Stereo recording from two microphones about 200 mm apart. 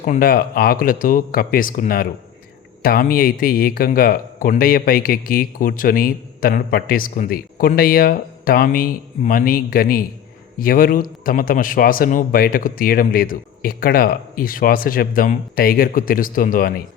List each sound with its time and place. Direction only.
0.0 s speech: 45° left (ahead or behind)